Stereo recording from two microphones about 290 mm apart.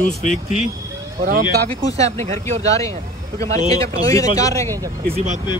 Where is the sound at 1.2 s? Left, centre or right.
Right.